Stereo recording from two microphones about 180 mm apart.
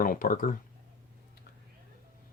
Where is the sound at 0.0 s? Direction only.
50° left (ahead or behind).